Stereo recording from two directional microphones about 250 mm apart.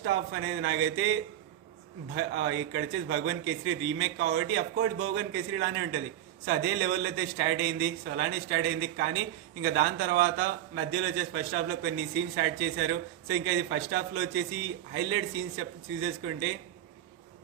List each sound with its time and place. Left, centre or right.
0.0 s a man's voice: right